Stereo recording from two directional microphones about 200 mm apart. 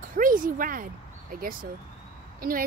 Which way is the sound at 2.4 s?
45° right (ahead or behind).